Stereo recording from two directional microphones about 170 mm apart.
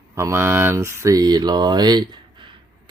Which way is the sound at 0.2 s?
15° right (ahead or behind).